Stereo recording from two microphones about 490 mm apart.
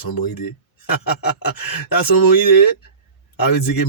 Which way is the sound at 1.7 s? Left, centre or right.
Left.